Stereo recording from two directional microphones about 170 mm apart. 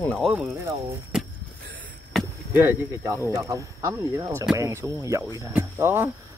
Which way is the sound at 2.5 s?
15° right (ahead or behind).